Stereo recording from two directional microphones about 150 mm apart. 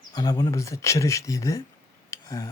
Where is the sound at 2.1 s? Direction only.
20° left (ahead or behind).